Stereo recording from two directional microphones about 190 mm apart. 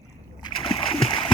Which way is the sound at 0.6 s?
30° left (ahead or behind).